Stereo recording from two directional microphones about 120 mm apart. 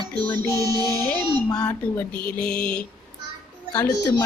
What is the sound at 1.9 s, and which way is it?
Speech, 10° left (ahead or behind).